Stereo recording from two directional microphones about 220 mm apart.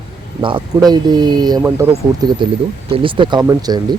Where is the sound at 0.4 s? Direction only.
20° right (ahead or behind).